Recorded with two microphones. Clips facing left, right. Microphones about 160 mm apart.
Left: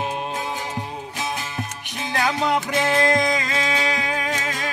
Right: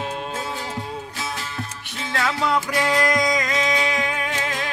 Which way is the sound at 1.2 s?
15° left (ahead or behind).